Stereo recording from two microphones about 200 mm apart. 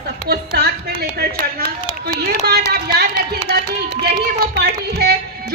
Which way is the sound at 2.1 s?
55° right (ahead or behind).